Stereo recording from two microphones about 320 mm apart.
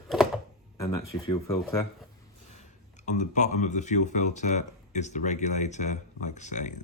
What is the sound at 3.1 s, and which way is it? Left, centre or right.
Speech, left.